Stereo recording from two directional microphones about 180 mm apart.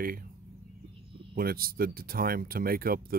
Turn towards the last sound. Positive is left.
turn(degrees=-55)  # may be behind; listen again after turning